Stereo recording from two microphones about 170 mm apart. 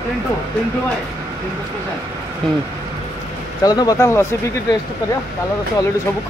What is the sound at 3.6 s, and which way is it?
Speech, 25° left (ahead or behind).